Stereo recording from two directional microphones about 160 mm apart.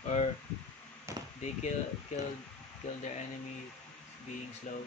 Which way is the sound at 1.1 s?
20° right (ahead or behind).